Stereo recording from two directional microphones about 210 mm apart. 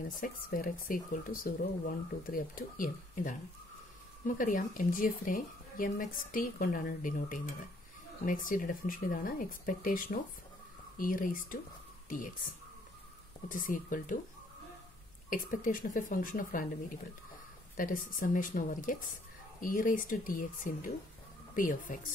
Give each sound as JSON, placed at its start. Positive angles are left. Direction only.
{"t": 0.2, "sound": "a woman's voice", "side_deg": 40}
{"t": 13.5, "sound": "a woman's voice", "side_deg": 40}
{"t": 15.2, "sound": "a woman's voice", "side_deg": 40}
{"t": 17.7, "sound": "a woman's voice", "side_deg": 40}